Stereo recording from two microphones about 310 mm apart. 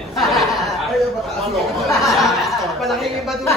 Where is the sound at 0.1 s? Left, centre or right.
Centre.